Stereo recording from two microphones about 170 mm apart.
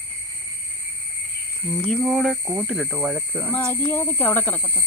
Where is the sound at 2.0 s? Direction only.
Centre (ahead or behind).